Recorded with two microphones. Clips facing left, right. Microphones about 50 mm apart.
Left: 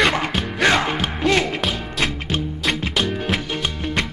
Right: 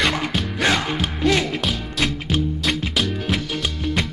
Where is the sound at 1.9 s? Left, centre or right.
Centre.